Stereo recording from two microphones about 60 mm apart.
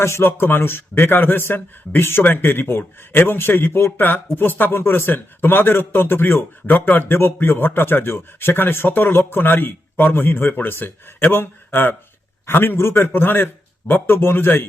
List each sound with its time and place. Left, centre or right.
0.0 s a man's voice: left